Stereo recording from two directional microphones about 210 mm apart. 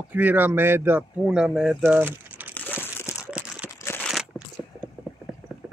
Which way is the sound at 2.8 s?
10° left (ahead or behind).